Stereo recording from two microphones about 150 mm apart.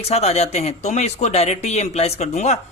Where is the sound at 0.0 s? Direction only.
45° left (ahead or behind).